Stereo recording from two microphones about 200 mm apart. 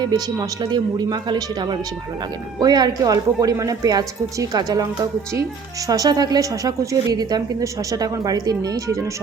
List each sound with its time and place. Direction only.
0.0 s a woman's voice: 20° right (ahead or behind)